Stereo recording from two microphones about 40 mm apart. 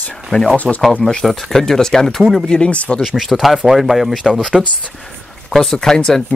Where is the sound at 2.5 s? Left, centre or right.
Left.